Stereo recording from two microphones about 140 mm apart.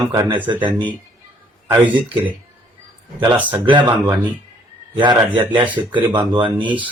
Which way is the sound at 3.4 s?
35° right (ahead or behind).